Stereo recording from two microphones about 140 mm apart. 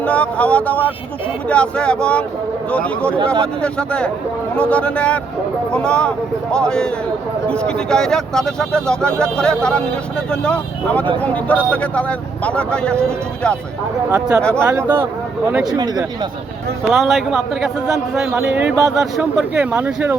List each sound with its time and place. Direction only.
0.0 s speech: 10° left (ahead or behind)
14.1 s speech: 5° right (ahead or behind)
15.6 s speech: 30° right (ahead or behind)
16.8 s a man's voice: centre (ahead or behind)